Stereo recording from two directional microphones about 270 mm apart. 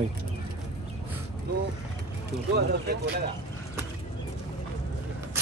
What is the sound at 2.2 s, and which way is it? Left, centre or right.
Speech, right.